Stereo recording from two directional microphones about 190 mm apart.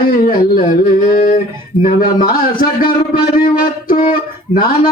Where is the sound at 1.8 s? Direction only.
50° left (ahead or behind).